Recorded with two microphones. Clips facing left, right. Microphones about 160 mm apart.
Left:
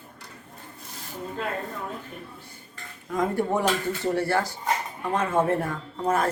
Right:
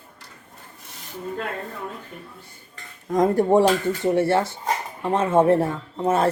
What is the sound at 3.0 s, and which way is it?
Speech, 40° right (ahead or behind).